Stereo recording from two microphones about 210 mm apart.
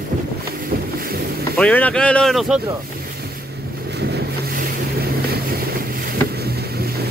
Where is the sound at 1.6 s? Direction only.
5° left (ahead or behind).